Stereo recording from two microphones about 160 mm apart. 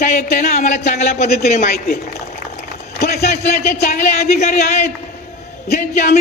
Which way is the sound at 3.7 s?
45° left (ahead or behind).